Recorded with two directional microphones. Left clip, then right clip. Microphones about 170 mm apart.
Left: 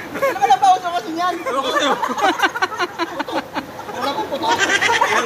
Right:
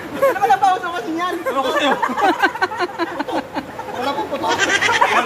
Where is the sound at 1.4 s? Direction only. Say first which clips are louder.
Right 1 dB; 30° right (ahead or behind).